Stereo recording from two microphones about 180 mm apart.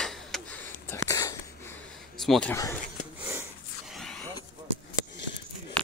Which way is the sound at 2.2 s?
Centre (ahead or behind).